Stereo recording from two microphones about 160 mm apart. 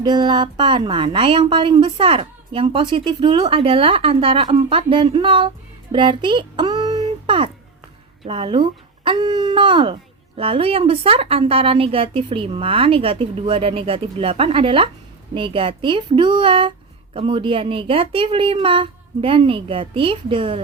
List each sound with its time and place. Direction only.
0.0 s speech: 30° right (ahead or behind)
5.9 s child singing: 30° right (ahead or behind)
7.0 s a sound: 35° right (ahead or behind)
8.2 s speech: 35° right (ahead or behind)